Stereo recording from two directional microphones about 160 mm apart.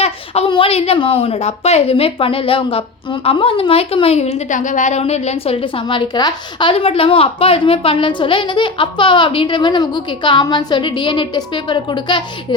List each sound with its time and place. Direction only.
0.0 s a woman's voice: 35° left (ahead or behind)